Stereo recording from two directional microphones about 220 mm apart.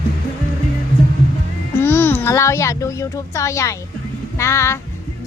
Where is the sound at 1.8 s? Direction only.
10° left (ahead or behind).